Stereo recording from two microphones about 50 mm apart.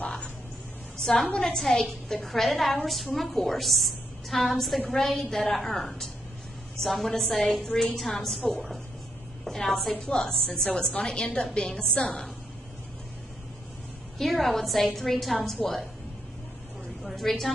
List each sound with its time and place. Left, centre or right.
1.0 s a woman's voice: centre
14.1 s a woman's voice: centre
17.0 s a woman's voice: centre